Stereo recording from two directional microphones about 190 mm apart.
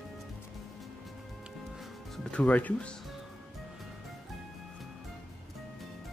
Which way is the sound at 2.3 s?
5° left (ahead or behind).